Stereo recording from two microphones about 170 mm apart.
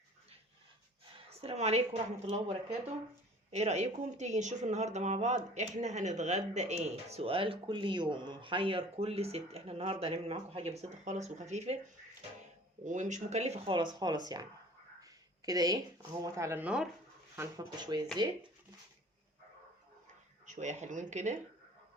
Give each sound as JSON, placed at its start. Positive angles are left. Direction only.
{"t": 1.3, "sound": "speech", "side_deg": -35}
{"t": 12.8, "sound": "speech", "side_deg": -45}
{"t": 13.7, "sound": "speech", "side_deg": -25}
{"t": 15.4, "sound": "speech", "side_deg": -20}
{"t": 17.6, "sound": "speech", "side_deg": -25}
{"t": 20.5, "sound": "speech", "side_deg": -45}